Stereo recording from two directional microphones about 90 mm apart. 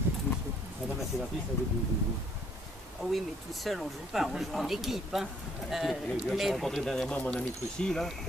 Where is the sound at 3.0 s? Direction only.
Centre (ahead or behind).